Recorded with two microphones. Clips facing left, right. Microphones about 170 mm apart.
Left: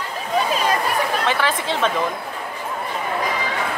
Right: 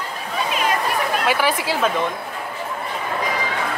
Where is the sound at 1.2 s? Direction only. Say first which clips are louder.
Right 1 dB; 10° right (ahead or behind).